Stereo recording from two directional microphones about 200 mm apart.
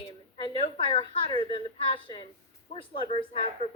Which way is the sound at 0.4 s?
25° left (ahead or behind).